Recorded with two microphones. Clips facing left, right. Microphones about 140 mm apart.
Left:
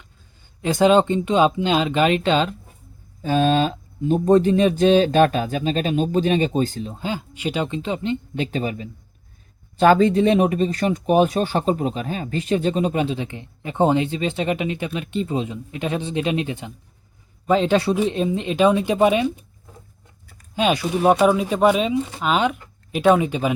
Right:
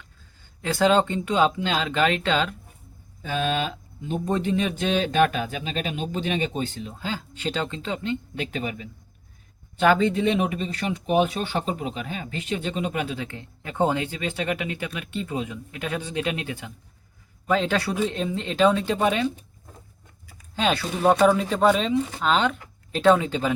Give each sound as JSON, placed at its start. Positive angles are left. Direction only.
{"t": 0.6, "sound": "speech", "side_deg": 20}
{"t": 3.2, "sound": "speech", "side_deg": 35}
{"t": 7.0, "sound": "speech", "side_deg": 15}
{"t": 20.6, "sound": "speech", "side_deg": 15}